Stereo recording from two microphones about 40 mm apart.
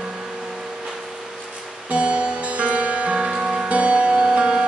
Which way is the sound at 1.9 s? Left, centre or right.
Right.